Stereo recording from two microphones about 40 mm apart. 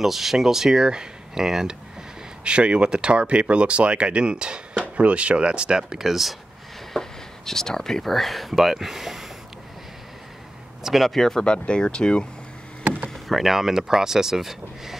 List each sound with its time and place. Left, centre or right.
0.0 s speech: centre
2.4 s speech: right; by 6.3 s centre
6.9 s a sound: centre
8.1 s speech: centre
10.8 s a sound: centre
11.1 s speech: centre
11.4 s speech: left
13.1 s speech: centre